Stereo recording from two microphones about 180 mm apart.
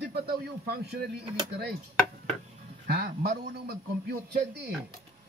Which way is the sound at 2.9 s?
60° right (ahead or behind).